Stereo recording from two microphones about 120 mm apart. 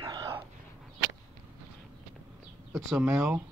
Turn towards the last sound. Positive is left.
turn(degrees=-5)  # may be behind; listen again after turning